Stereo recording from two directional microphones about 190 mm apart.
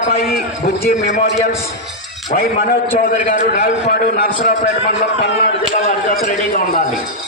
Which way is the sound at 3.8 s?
55° left (ahead or behind).